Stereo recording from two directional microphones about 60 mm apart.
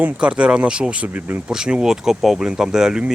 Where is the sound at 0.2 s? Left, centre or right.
Centre.